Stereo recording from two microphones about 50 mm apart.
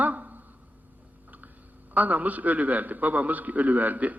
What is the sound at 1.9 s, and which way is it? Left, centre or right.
A man's voice, right.